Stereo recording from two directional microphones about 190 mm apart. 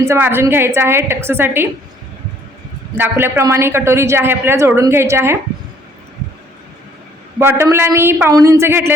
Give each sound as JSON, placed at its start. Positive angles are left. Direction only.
{"t": 0.0, "sound": "speech", "side_deg": -15}
{"t": 3.0, "sound": "speech", "side_deg": -10}
{"t": 7.3, "sound": "speech", "side_deg": -15}